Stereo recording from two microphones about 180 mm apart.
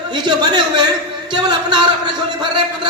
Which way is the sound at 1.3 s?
25° right (ahead or behind).